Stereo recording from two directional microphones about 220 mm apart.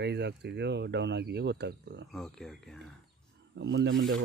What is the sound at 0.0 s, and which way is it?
Speech, 50° right (ahead or behind).